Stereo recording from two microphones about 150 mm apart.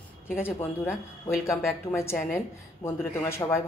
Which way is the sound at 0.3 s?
15° left (ahead or behind).